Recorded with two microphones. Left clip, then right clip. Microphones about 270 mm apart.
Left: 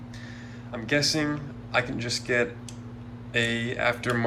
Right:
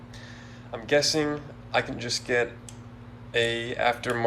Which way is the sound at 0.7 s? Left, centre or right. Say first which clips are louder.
Right 2 dB; centre.